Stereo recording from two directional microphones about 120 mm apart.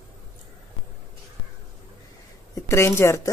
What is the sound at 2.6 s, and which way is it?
Speech, 20° left (ahead or behind).